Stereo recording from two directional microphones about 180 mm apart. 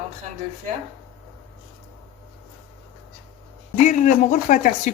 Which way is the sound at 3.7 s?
45° left (ahead or behind).